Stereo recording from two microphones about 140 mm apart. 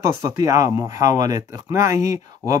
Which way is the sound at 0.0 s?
20° right (ahead or behind).